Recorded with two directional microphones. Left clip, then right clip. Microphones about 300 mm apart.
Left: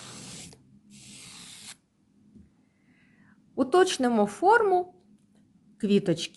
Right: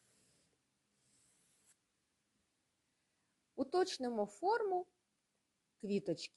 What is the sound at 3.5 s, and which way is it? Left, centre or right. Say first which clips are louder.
Speech: left 14 dB; centre.